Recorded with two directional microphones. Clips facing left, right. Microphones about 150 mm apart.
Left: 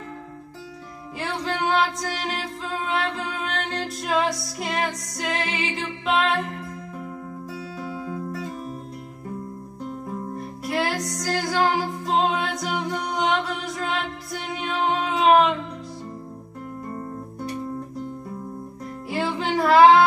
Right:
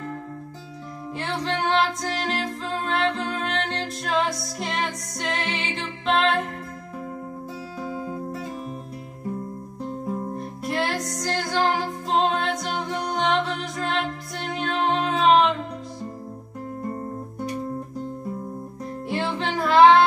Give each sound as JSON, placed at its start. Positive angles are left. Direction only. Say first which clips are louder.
{"t": 1.2, "sound": "music", "louder": "even", "side_deg": 5}
{"t": 7.8, "sound": "music", "louder": "right 2 dB", "side_deg": -40}
{"t": 10.6, "sound": "music", "louder": "left 1 dB", "side_deg": 0}
{"t": 19.0, "sound": "music", "louder": "left 1 dB", "side_deg": 0}